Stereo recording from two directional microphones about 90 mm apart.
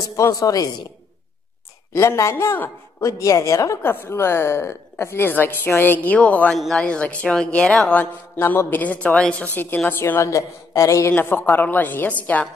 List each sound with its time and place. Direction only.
0.2 s a woman's voice: 40° left (ahead or behind)
2.0 s a woman's voice: 30° left (ahead or behind)
3.0 s a woman's voice: 35° left (ahead or behind); by 6.5 s 15° left (ahead or behind)
6.5 s speech: 5° left (ahead or behind)
8.4 s a woman's voice: 25° left (ahead or behind)
10.3 s a woman's voice: 35° left (ahead or behind)
11.1 s a woman's voice: 25° left (ahead or behind)